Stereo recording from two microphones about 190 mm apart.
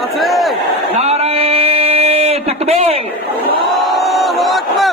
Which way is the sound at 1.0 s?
30° right (ahead or behind).